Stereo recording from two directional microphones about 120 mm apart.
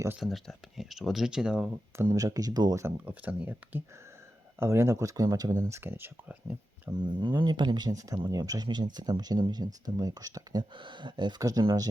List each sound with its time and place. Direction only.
0.2 s speech: centre (ahead or behind)
2.0 s speech: 30° right (ahead or behind)
2.8 s speech: 15° right (ahead or behind)
6.9 s speech: 40° right (ahead or behind)